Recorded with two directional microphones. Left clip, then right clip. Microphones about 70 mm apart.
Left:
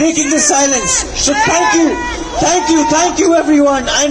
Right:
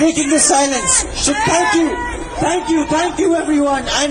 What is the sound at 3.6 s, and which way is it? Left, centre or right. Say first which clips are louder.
Speech: left 4 dB; left.